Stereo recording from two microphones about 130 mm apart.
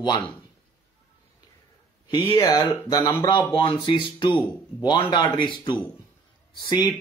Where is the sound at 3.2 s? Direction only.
40° left (ahead or behind).